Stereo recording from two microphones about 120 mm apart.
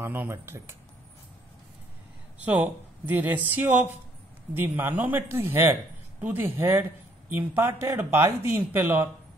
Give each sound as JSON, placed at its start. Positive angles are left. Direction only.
{"t": 0.0, "sound": "speech", "side_deg": -20}
{"t": 2.4, "sound": "speech", "side_deg": -15}